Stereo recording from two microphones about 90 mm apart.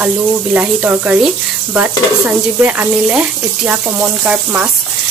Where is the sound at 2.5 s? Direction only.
20° right (ahead or behind).